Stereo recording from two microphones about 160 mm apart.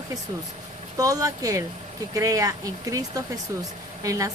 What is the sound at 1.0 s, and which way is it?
Speech, 20° right (ahead or behind).